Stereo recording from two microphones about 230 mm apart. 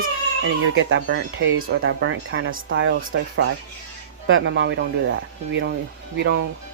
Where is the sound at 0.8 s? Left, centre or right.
Right.